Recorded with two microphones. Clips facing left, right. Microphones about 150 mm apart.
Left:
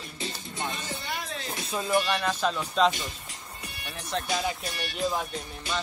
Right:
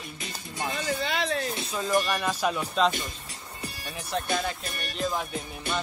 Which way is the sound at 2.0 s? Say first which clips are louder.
Even; 5° right (ahead or behind).